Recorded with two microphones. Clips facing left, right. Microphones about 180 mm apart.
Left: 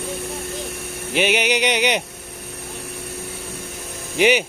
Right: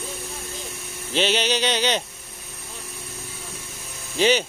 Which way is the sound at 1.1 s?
15° left (ahead or behind).